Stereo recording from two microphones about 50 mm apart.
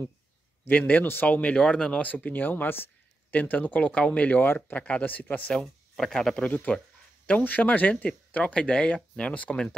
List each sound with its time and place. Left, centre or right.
0.7 s speech: left
2.0 s speech: left
3.3 s speech: left
5.6 s speech: centre
6.7 s speech: left